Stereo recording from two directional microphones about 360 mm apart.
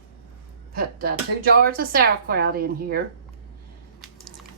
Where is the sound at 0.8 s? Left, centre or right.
Right.